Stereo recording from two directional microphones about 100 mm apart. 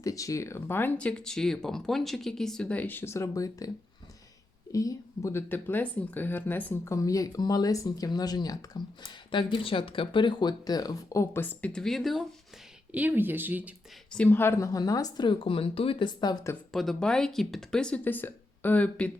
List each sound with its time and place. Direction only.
0.0 s speech: 35° left (ahead or behind)
4.7 s speech: 35° left (ahead or behind); by 6.7 s 20° left (ahead or behind)
6.8 s speech: 35° left (ahead or behind)
9.3 s speech: 55° left (ahead or behind); by 11.4 s 30° left (ahead or behind)
11.4 s speech: 10° left (ahead or behind)
12.9 s speech: 15° right (ahead or behind)
14.3 s speech: 20° left (ahead or behind)
14.7 s speech: 35° left (ahead or behind); by 16.0 s 70° left (ahead or behind)
16.0 s speech: 45° left (ahead or behind)
16.7 s speech: centre (ahead or behind)
18.0 s speech: 20° left (ahead or behind)